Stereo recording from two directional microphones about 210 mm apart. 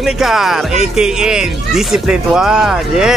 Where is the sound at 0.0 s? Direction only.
Centre (ahead or behind).